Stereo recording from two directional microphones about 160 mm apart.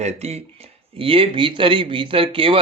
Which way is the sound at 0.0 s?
45° right (ahead or behind).